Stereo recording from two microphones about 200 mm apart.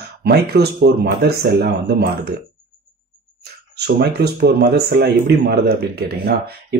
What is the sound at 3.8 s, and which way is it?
Speech, 55° right (ahead or behind).